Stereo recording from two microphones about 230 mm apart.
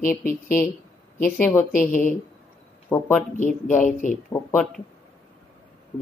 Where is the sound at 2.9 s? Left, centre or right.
Centre.